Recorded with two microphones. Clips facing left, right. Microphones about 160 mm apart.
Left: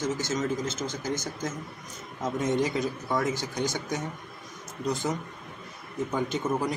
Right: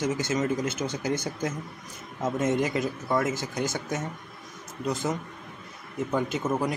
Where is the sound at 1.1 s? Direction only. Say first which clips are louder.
Right 3 dB; 60° right (ahead or behind).